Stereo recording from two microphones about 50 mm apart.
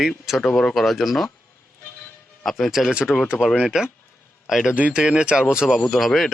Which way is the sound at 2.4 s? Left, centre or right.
Centre.